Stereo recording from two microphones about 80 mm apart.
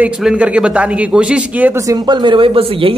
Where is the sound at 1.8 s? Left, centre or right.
Right.